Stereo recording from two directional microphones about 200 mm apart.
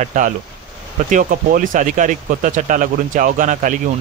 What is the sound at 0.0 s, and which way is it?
Speech, 40° right (ahead or behind).